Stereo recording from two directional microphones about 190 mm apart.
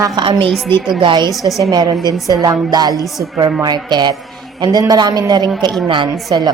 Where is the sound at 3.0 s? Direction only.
Centre (ahead or behind).